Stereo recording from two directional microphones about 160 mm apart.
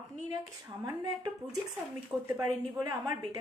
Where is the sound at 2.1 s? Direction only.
Centre (ahead or behind).